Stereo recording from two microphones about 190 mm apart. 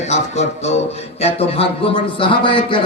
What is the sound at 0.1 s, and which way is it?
Speech, 35° left (ahead or behind).